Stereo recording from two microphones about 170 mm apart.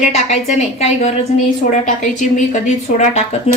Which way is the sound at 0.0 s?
40° left (ahead or behind).